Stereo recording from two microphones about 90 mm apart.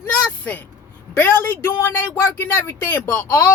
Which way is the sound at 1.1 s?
20° left (ahead or behind).